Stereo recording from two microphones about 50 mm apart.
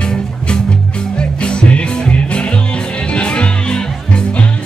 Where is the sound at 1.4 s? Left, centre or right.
Left.